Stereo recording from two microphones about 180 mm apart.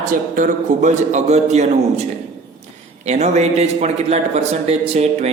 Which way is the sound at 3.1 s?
40° right (ahead or behind).